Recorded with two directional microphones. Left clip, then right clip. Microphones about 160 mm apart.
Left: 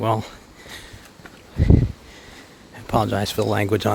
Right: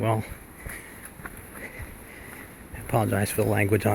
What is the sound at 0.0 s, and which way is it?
Speech, 30° left (ahead or behind).